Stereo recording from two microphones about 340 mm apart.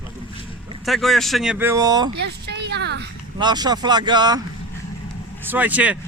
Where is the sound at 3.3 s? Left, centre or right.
Centre.